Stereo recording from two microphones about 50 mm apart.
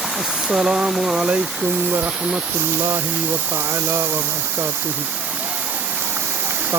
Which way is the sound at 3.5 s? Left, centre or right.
Right.